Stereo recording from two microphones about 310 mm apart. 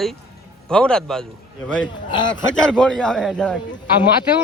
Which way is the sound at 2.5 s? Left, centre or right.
Centre.